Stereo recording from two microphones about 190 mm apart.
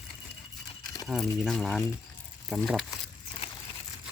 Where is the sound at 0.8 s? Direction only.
20° left (ahead or behind).